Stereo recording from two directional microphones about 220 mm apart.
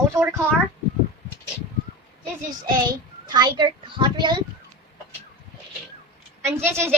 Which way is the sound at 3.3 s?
20° right (ahead or behind).